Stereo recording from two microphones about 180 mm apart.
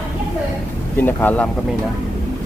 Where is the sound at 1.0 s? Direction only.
10° left (ahead or behind).